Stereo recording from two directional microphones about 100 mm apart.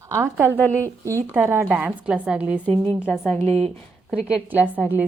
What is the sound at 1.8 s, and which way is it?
Speech, 10° right (ahead or behind).